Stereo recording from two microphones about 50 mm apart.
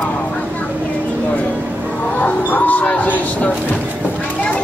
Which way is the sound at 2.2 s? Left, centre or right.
Left.